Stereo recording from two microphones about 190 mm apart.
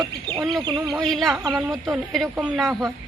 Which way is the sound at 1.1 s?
Centre (ahead or behind).